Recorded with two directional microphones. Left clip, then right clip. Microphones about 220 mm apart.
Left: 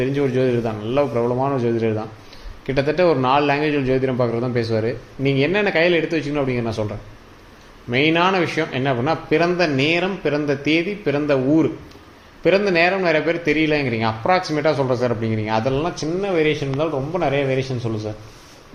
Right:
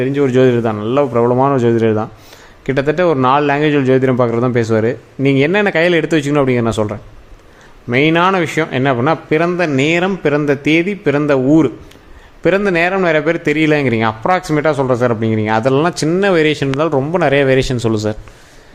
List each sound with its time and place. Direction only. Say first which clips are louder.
0.0 s a man's voice: right 7 dB; 25° right (ahead or behind); by 18.1 s 55° right (ahead or behind)